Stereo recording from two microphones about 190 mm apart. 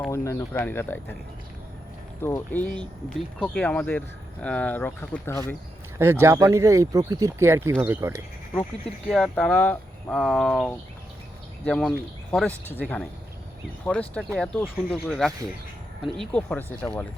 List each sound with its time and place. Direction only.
0.1 s speech: 15° left (ahead or behind)
2.2 s speech: 10° left (ahead or behind)
6.0 s speech: 10° right (ahead or behind)
9.0 s speech: 5° left (ahead or behind)